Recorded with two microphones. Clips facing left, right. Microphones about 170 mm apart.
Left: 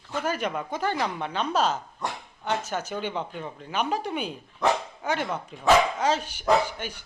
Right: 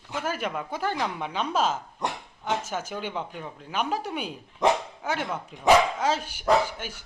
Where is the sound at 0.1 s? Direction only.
5° right (ahead or behind).